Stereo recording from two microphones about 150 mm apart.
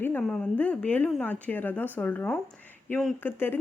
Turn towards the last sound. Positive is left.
turn(degrees=15)  # may be behind; listen again after turning